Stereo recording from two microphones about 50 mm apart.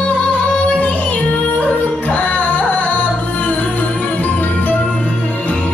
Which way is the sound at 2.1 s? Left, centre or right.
Left.